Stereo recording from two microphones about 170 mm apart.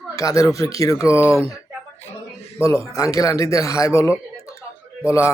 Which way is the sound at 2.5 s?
15° left (ahead or behind).